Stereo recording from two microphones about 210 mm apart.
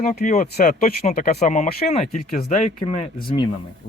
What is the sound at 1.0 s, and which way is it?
Speech, 35° left (ahead or behind).